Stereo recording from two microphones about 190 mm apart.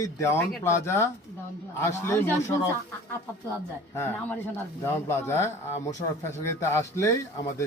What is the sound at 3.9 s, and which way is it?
Speech, 10° left (ahead or behind).